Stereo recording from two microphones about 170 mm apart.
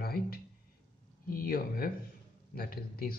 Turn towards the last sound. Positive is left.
turn(degrees=60)  # may be behind; listen again after turning